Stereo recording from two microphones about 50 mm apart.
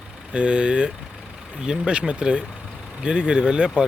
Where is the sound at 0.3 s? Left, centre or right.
Centre.